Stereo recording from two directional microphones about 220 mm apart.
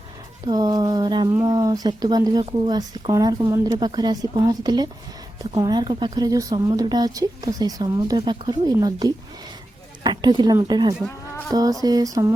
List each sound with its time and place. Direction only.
0.4 s speech: 20° right (ahead or behind)
11.0 s speech: centre (ahead or behind)
11.5 s speech: 15° right (ahead or behind)